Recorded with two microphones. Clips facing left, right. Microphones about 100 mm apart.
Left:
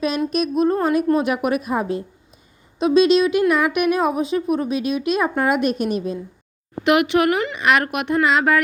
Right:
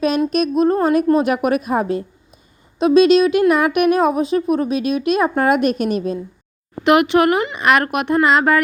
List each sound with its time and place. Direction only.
0.3 s a woman's voice: 50° right (ahead or behind)
6.8 s speech: 35° right (ahead or behind)
7.5 s a woman's voice: 45° right (ahead or behind)